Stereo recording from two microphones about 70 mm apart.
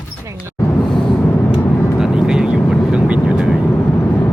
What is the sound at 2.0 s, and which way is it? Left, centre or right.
Vehicle, centre.